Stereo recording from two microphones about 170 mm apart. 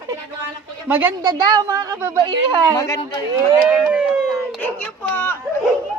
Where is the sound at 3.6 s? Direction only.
5° right (ahead or behind).